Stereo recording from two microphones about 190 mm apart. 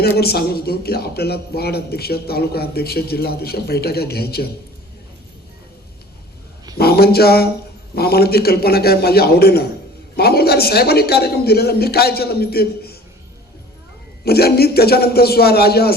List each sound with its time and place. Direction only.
0.2 s a man's voice: 55° left (ahead or behind)
6.7 s a man's voice: 55° left (ahead or behind)
14.3 s a man's voice: 55° left (ahead or behind)